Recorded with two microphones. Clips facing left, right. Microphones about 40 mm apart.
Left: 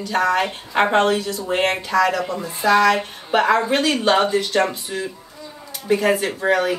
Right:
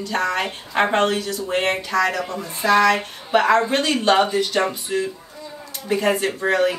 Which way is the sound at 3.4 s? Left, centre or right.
Centre.